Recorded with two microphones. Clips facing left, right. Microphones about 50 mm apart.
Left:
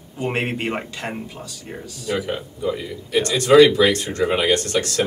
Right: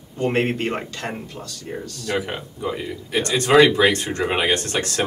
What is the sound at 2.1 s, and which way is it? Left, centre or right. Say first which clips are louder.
Speech: even; centre.